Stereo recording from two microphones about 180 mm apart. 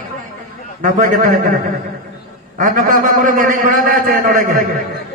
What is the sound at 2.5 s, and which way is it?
A man's voice, 50° right (ahead or behind).